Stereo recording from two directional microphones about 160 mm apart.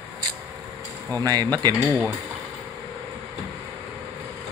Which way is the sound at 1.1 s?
25° right (ahead or behind).